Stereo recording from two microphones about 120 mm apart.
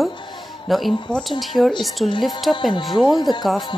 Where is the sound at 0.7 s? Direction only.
Centre (ahead or behind).